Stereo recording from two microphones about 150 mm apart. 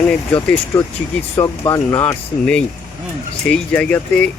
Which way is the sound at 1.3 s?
20° left (ahead or behind).